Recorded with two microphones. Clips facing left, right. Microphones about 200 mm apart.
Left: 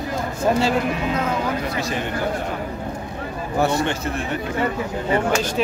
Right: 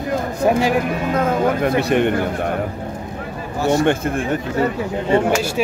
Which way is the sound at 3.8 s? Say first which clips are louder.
Right 6 dB; 55° right (ahead or behind).